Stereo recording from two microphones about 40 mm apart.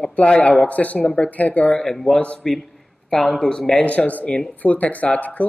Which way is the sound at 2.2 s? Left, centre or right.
Left.